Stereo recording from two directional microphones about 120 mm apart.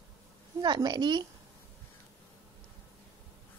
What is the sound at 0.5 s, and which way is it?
Speech, 35° right (ahead or behind).